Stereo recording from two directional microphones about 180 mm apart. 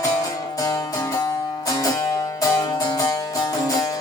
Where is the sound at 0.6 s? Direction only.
20° left (ahead or behind).